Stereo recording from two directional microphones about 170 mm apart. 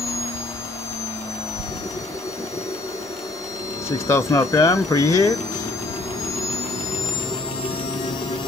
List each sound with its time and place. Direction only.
4.1 s speech: 20° left (ahead or behind)